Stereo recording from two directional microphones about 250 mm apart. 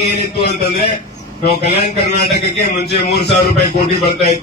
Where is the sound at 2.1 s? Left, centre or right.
Left.